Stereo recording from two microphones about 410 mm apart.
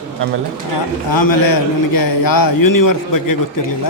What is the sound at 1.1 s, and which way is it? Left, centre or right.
A man's voice, left.